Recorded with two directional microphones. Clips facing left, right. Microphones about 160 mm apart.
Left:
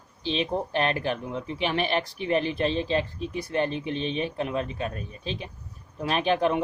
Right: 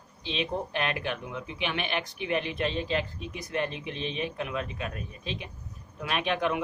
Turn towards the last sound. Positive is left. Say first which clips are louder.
# left 5 dB
turn(degrees=30)  # may be behind; listen again after turning